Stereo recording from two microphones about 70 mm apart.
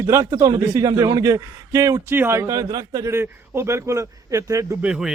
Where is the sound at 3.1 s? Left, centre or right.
Right.